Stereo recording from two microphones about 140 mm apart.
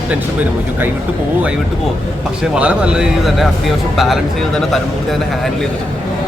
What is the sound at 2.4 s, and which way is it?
A man's voice, 10° right (ahead or behind).